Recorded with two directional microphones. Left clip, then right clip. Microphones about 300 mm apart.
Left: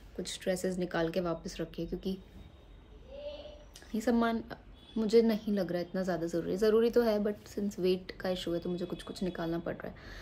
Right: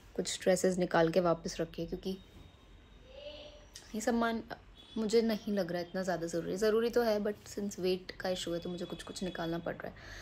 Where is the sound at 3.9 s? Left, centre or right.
Centre.